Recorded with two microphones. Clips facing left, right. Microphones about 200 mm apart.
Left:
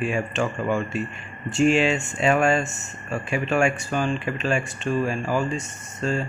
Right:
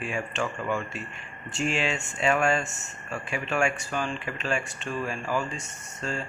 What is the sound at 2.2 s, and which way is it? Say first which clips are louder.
Speech: left 4 dB; 25° left (ahead or behind).